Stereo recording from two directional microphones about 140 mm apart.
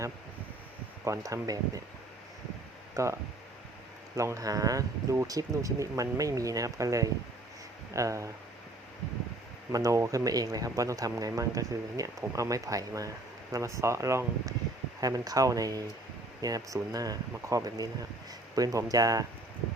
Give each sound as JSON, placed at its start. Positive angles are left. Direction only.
{"t": 1.0, "sound": "speech", "side_deg": -20}
{"t": 2.9, "sound": "speech", "side_deg": -20}
{"t": 9.7, "sound": "speech", "side_deg": -25}